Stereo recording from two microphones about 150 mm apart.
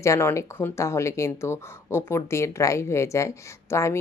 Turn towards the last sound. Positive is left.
turn(degrees=20)  # may be behind; listen again after turning